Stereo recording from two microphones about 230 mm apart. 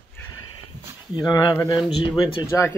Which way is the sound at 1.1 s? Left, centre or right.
Centre.